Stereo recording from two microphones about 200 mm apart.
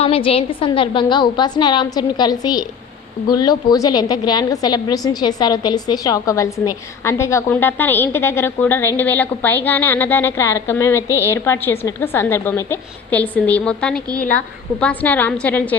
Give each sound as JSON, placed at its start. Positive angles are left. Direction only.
{"t": 0.0, "sound": "a woman's voice", "side_deg": 30}